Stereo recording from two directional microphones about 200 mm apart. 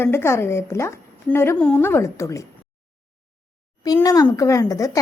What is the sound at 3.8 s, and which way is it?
A woman's voice, 20° left (ahead or behind).